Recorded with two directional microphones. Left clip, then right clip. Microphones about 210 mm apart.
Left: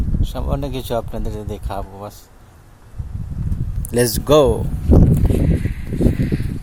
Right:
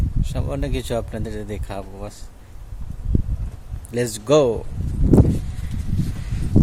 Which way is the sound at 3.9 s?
30° left (ahead or behind).